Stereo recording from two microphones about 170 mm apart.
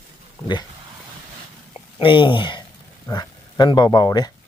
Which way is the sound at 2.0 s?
30° left (ahead or behind).